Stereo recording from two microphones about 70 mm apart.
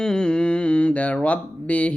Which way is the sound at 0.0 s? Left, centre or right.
Centre.